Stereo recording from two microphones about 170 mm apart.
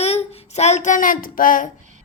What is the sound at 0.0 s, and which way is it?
Child singing, 40° left (ahead or behind).